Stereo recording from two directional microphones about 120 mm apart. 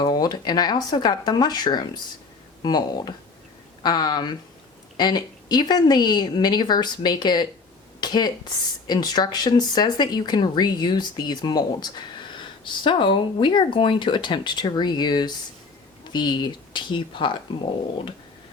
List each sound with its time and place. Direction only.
0.0 s speech: 35° left (ahead or behind)
8.0 s a sound: 35° left (ahead or behind)
8.9 s speech: 35° left (ahead or behind)